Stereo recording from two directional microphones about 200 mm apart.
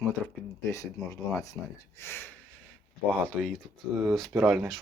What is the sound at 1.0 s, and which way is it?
Speech, 15° left (ahead or behind).